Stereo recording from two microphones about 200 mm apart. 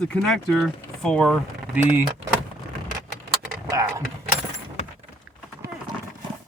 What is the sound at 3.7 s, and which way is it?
Vehicle, 15° right (ahead or behind).